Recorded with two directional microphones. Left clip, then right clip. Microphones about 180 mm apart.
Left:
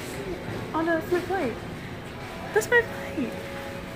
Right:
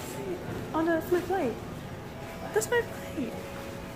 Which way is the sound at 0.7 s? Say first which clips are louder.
Left 2 dB; 15° right (ahead or behind).